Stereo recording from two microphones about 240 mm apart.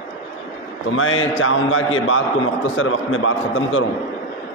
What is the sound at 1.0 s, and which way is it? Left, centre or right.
A man's voice, left.